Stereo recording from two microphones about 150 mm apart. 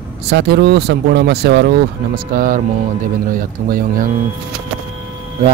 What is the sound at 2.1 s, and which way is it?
Speech, 70° right (ahead or behind).